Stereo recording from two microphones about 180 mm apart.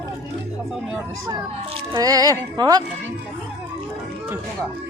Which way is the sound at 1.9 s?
20° right (ahead or behind).